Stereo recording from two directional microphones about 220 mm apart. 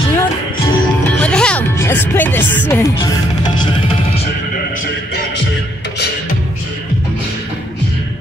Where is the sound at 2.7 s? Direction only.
15° left (ahead or behind).